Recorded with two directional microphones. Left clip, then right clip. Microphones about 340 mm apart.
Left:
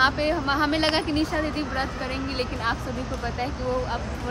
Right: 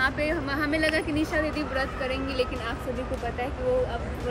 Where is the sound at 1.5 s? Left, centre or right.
Left.